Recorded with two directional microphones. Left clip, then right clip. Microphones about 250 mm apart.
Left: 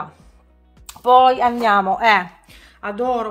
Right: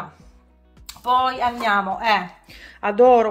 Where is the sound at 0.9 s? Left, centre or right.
Left.